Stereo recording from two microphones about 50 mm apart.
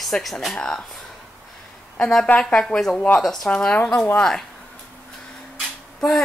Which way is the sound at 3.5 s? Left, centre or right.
Centre.